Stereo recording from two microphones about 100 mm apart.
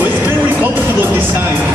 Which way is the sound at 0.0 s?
20° right (ahead or behind).